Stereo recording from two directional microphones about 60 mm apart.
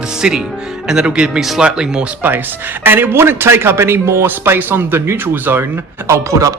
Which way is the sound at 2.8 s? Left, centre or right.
Right.